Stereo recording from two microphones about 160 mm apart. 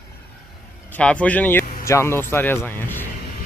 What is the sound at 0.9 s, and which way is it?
A man's voice, 10° left (ahead or behind).